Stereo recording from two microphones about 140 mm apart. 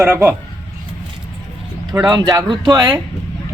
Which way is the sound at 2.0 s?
30° right (ahead or behind).